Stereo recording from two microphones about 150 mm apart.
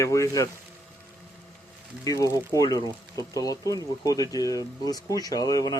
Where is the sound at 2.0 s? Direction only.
25° left (ahead or behind).